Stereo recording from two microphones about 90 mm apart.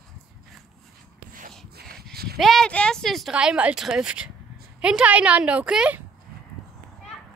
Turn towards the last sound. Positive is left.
turn(degrees=-10)  # may be behind; listen again after turning